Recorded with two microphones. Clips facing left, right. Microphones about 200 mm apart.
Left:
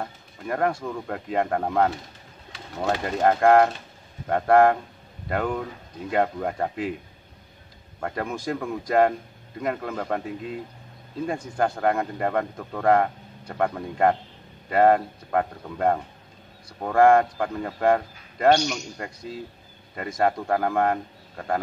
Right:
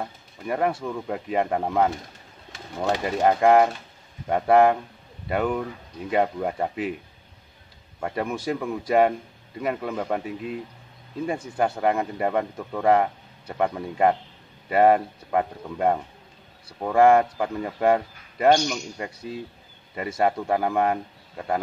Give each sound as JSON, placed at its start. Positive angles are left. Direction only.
{"t": 0.0, "sound": "speech", "side_deg": -5}
{"t": 2.9, "sound": "speech", "side_deg": -10}
{"t": 8.0, "sound": "speech", "side_deg": -5}